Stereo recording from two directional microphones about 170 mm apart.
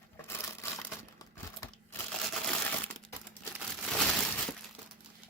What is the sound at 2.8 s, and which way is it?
Crumpling, 5° left (ahead or behind).